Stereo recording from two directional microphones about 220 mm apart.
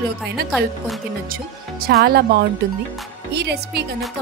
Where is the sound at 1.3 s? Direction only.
45° right (ahead or behind).